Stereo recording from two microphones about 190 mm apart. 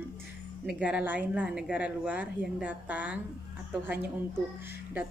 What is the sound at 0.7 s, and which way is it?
Speech, 5° right (ahead or behind).